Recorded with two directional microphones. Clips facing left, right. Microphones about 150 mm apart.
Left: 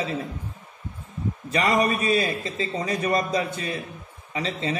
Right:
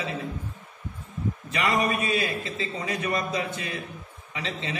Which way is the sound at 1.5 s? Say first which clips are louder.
Left 4 dB; 35° left (ahead or behind).